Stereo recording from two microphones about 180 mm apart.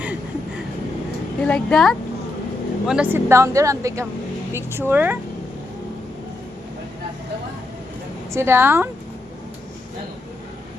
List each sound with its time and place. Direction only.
1.4 s a woman's voice: 5° left (ahead or behind); by 5.1 s 10° right (ahead or behind)
8.3 s speech: 15° right (ahead or behind)